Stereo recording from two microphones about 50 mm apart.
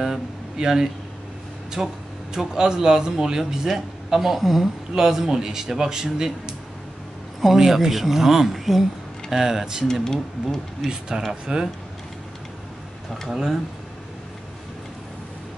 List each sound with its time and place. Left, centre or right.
0.0 s speech: centre
10.0 s speech: centre
10.9 s speech: centre
13.3 s speech: centre